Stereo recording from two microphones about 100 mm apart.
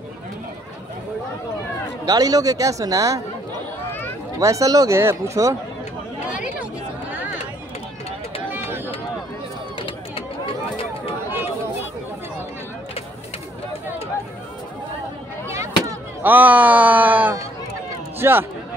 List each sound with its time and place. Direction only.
2.0 s speech: 40° right (ahead or behind)
4.4 s speech: 35° right (ahead or behind)
8.5 s a sound: 20° right (ahead or behind)
9.8 s a sound: 60° left (ahead or behind)
15.5 s chop: 30° right (ahead or behind)
16.2 s speech: 20° right (ahead or behind)